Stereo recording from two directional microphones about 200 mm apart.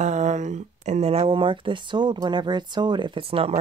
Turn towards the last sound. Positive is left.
turn(degrees=-30)  # may be behind; listen again after turning